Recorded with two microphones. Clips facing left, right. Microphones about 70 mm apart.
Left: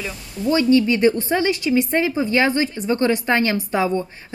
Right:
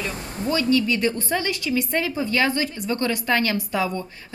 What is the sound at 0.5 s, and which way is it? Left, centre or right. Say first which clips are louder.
A woman's voice: left 5 dB; left.